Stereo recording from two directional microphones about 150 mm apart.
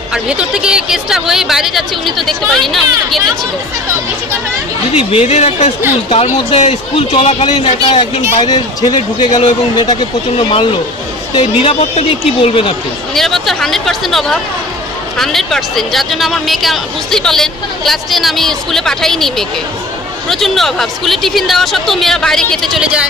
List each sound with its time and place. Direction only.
0.1 s speech: 5° right (ahead or behind)
4.9 s speech: 40° left (ahead or behind)
11.3 s speech: 35° left (ahead or behind)
13.1 s speech: centre (ahead or behind)